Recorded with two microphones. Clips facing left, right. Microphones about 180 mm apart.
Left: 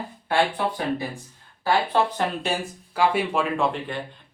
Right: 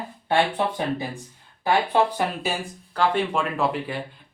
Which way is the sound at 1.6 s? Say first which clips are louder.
Right 1 dB; 15° right (ahead or behind).